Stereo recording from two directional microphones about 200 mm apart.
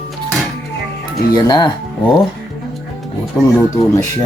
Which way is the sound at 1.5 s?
20° left (ahead or behind).